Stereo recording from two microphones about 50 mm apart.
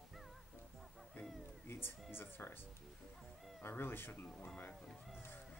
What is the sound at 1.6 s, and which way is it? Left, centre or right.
Speech, left.